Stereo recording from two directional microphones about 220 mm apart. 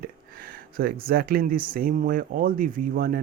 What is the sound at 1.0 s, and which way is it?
Speech, 45° right (ahead or behind).